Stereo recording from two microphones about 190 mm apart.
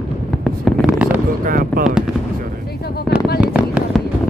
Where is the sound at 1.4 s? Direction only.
50° right (ahead or behind).